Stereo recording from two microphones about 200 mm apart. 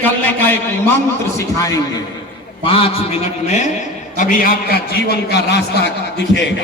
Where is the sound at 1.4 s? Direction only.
15° left (ahead or behind).